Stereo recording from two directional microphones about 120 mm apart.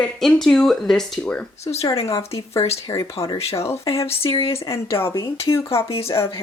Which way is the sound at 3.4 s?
55° left (ahead or behind).